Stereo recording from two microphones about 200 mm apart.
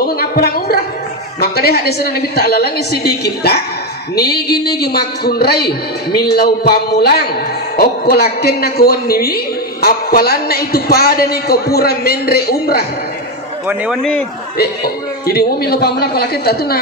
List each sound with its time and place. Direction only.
0.0 s a sound: 50° left (ahead or behind)
1.4 s a man's voice: 50° left (ahead or behind)
13.7 s a man's voice: 5° right (ahead or behind)
15.2 s a man's voice: 50° left (ahead or behind)